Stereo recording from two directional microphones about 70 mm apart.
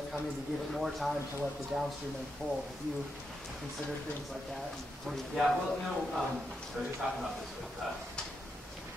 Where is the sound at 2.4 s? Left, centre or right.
Centre.